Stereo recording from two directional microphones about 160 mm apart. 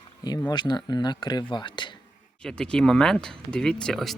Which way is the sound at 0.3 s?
25° left (ahead or behind).